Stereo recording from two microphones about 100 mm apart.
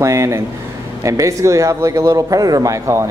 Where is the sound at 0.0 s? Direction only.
30° right (ahead or behind).